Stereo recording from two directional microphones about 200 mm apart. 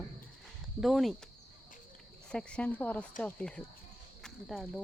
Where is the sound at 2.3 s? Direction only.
5° left (ahead or behind).